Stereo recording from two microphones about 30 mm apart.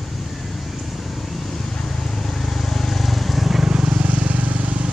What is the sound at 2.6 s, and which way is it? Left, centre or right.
Vehicle, centre.